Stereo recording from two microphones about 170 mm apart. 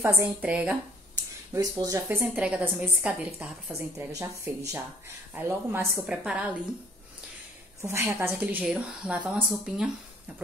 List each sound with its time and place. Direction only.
0.0 s a woman's voice: 15° right (ahead or behind)
1.5 s a woman's voice: 20° right (ahead or behind)
2.2 s a woman's voice: 5° right (ahead or behind)
7.8 s a woman's voice: 15° right (ahead or behind)